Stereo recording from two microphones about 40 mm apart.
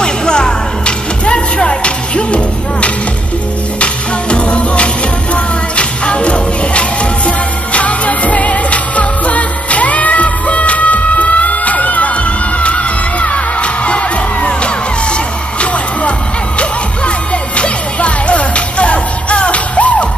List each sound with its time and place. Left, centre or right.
0.0 s music: left
12.5 s music: left
16.5 s music: left